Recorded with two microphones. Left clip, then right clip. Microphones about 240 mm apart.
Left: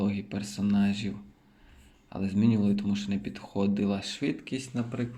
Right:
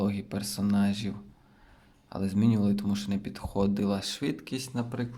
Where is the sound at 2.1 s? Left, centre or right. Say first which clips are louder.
Even; centre.